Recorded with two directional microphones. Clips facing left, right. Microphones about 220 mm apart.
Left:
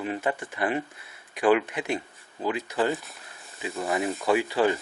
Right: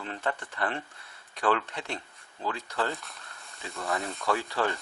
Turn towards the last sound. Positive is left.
turn(degrees=15)  # may be behind; listen again after turning